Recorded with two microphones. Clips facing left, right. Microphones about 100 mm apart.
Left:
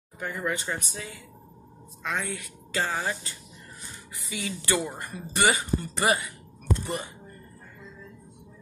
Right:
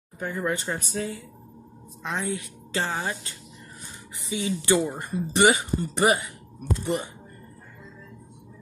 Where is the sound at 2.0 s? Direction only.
25° right (ahead or behind).